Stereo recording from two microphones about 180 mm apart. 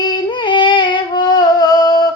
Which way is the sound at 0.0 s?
25° left (ahead or behind).